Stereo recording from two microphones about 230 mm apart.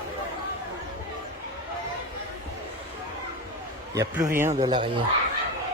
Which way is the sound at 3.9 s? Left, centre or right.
Centre.